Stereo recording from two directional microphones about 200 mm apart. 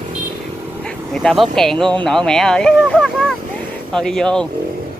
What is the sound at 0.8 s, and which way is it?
Speech, 5° left (ahead or behind).